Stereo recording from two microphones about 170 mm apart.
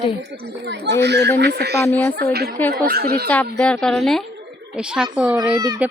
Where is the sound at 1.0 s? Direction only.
85° right.